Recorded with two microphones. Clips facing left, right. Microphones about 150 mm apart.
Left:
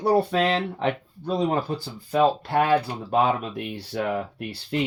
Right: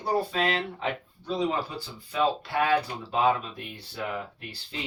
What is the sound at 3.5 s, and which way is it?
Speech, 75° left (ahead or behind).